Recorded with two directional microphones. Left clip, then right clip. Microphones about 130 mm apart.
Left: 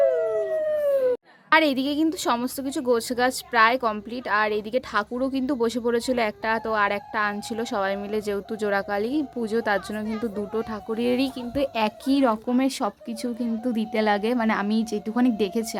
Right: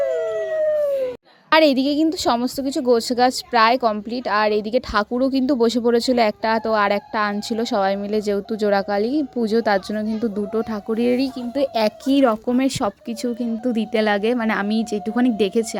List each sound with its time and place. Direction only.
0.0 s a sound: 70° left (ahead or behind)
1.5 s a woman's voice: 25° right (ahead or behind)
11.1 s a woman's voice: 10° right (ahead or behind)